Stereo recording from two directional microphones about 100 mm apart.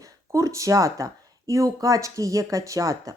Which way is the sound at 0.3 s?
30° right (ahead or behind).